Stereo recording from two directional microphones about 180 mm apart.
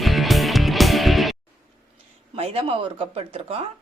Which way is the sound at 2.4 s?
30° right (ahead or behind).